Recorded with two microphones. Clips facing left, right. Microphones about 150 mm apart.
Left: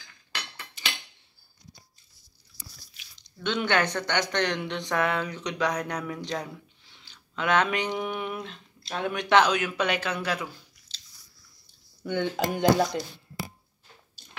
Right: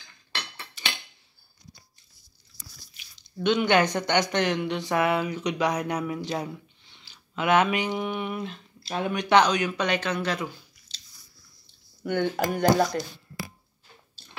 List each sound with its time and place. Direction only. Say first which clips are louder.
3.4 s speech: right 4 dB; 15° right (ahead or behind); by 10.4 s 10° left (ahead or behind)
10.9 s biting: right 1 dB; 15° right (ahead or behind)
12.1 s speech: right 2 dB; 20° left (ahead or behind)